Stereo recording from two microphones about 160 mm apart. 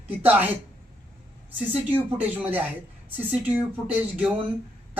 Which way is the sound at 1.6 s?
10° right (ahead or behind).